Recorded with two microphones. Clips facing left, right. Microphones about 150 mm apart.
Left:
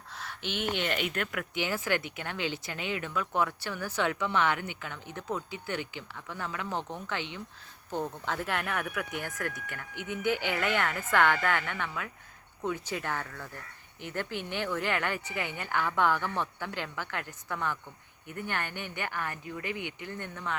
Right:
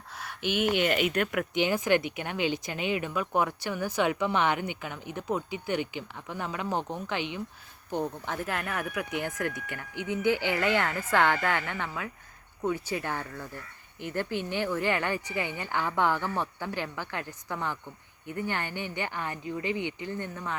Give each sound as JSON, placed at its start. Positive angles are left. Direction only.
{"t": 0.1, "sound": "speech", "side_deg": -10}
{"t": 8.5, "sound": "speech", "side_deg": -5}
{"t": 9.9, "sound": "speech", "side_deg": 55}
{"t": 10.5, "sound": "speech", "side_deg": -10}
{"t": 14.5, "sound": "speech", "side_deg": -10}